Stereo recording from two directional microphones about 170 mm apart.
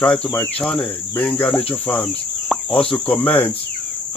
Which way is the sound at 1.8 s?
5° left (ahead or behind).